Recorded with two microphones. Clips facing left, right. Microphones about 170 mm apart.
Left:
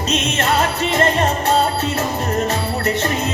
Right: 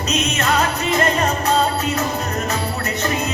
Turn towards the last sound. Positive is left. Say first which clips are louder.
# left 3 dB
turn(degrees=30)  # may be behind; listen again after turning